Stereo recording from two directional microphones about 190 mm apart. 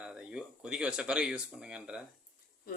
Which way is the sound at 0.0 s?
5° right (ahead or behind).